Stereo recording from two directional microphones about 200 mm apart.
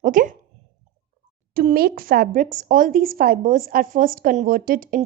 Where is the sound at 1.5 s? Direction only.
50° right (ahead or behind).